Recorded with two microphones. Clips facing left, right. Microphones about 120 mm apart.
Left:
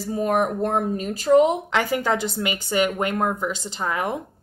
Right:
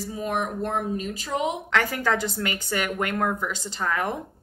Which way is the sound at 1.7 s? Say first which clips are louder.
Left 2 dB; 20° left (ahead or behind).